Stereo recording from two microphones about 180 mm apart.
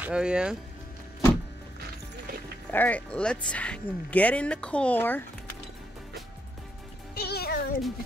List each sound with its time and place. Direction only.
0.0 s speech: 5° right (ahead or behind)
2.7 s speech: 10° left (ahead or behind)
7.2 s music: 60° left (ahead or behind)